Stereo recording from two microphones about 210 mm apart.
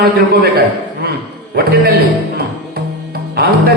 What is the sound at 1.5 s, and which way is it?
Speech, 45° right (ahead or behind).